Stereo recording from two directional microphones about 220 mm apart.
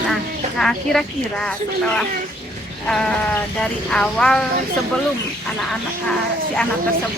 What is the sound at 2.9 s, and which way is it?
Speech, 5° left (ahead or behind).